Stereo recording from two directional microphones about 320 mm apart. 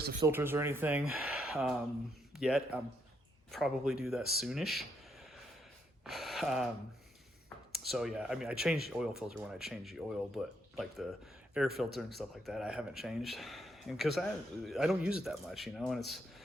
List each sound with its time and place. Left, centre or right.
0.0 s speech: right
0.3 s speech: centre
6.1 s speech: centre
7.7 s speech: centre